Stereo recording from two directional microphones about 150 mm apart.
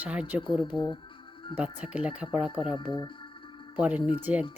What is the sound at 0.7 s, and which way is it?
Speech, 30° left (ahead or behind).